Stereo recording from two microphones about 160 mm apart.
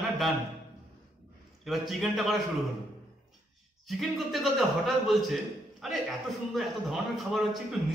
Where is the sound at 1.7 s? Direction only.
Centre (ahead or behind).